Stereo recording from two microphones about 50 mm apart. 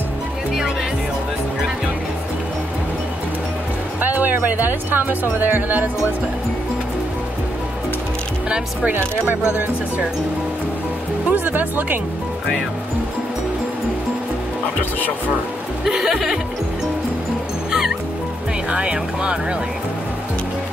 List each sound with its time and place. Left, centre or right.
4.0 s music: right
5.4 s speech: right
8.9 s speech: right
9.5 s speech: right
11.3 s speech: right
15.8 s speech: centre
17.6 s music: centre
18.7 s speech: centre